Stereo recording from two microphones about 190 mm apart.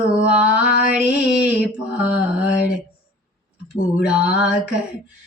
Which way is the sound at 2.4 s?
60° left (ahead or behind).